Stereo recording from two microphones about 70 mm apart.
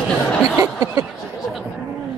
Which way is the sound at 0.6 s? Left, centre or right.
Right.